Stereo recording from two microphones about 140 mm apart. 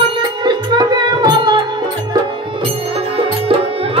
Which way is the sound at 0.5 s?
30° right (ahead or behind).